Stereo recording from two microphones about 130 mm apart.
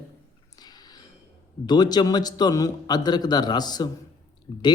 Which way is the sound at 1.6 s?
30° left (ahead or behind).